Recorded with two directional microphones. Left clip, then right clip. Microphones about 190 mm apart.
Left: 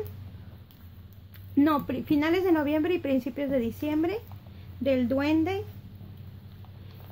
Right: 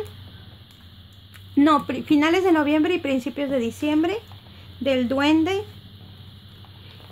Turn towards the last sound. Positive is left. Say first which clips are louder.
# right 6 dB
turn(degrees=-20)  # may be behind; listen again after turning